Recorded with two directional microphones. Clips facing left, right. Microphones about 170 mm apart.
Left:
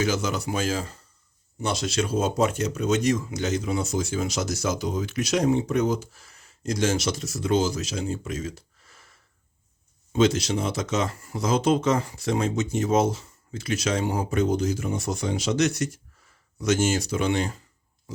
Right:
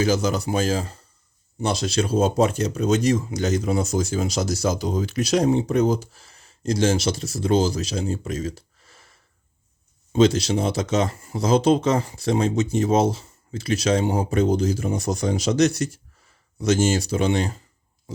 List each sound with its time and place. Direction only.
0.0 s speech: 35° right (ahead or behind)
10.1 s speech: 35° right (ahead or behind)